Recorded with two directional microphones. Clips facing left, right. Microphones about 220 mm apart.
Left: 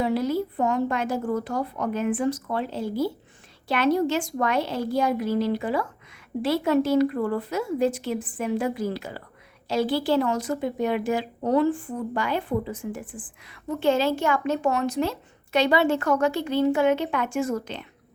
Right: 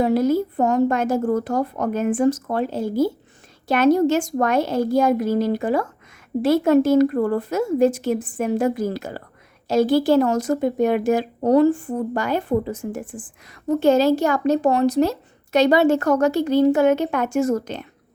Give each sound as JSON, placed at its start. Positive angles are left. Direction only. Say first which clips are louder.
{"t": 0.0, "sound": "a woman's voice", "louder": "right 6 dB", "side_deg": -45}